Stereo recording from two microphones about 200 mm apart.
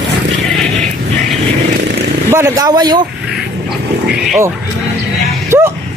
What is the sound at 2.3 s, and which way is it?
Speech, 10° right (ahead or behind).